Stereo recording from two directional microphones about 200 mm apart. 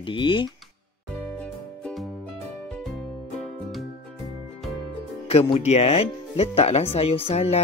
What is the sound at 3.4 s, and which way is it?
Music, centre (ahead or behind).